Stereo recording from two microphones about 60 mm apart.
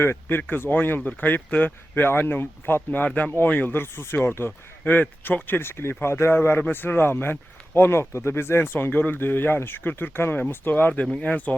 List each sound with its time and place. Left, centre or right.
0.0 s speech: left
8.9 s speech: left
11.0 s speech: centre